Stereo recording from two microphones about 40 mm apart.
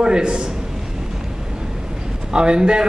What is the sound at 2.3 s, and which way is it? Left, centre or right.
Speech, right.